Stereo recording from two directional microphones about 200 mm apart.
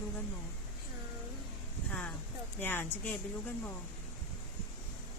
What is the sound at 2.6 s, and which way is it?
Speech, 10° left (ahead or behind).